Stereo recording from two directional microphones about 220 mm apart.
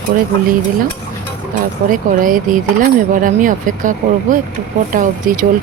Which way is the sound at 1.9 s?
35° right (ahead or behind).